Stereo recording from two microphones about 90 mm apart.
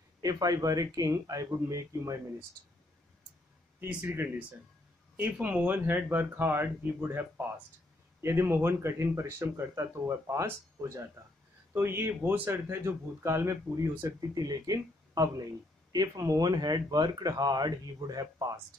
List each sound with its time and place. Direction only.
0.2 s speech: 40° right (ahead or behind)
3.8 s speech: 25° right (ahead or behind); by 18.6 s 40° right (ahead or behind)